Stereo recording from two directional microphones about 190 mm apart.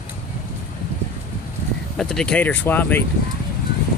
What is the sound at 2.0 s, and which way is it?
Speech, 5° left (ahead or behind).